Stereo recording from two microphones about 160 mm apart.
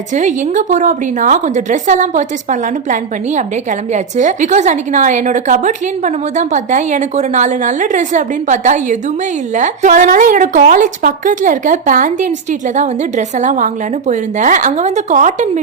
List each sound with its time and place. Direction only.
0.1 s a woman's voice: 50° right (ahead or behind)